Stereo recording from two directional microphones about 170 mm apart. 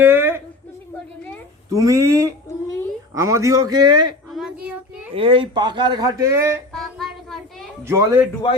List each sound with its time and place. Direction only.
0.0 s a sound: 15° right (ahead or behind)
1.7 s speech: 20° right (ahead or behind)
4.3 s child singing: centre (ahead or behind)
5.1 s speech: 30° right (ahead or behind); by 6.6 s 15° right (ahead or behind)
6.7 s child singing: centre (ahead or behind)
7.9 s speech: 15° right (ahead or behind)